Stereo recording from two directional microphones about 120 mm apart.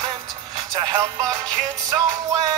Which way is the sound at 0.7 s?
30° right (ahead or behind).